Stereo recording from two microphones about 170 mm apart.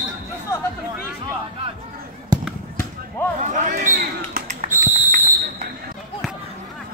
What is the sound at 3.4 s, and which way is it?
Basketball bounce, 50° right (ahead or behind).